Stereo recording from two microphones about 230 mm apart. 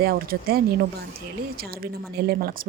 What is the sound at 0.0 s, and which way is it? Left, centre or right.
Speech, right.